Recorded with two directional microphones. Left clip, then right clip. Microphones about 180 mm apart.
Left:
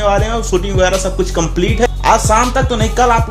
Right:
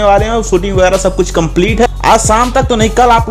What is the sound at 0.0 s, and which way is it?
Speech, 40° right (ahead or behind).